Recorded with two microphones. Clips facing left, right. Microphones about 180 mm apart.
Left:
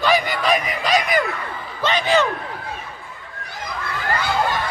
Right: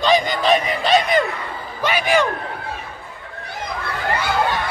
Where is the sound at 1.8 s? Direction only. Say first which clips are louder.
Even; 10° right (ahead or behind).